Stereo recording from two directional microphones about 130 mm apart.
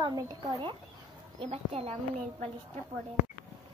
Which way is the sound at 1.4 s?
50° right (ahead or behind).